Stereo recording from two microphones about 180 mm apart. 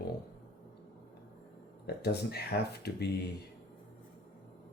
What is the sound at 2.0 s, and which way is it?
Speech, 65° left (ahead or behind).